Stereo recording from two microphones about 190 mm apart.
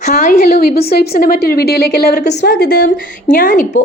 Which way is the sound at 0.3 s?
55° left (ahead or behind).